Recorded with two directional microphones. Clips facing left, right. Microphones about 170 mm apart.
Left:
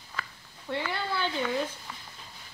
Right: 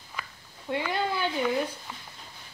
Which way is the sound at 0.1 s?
15° right (ahead or behind).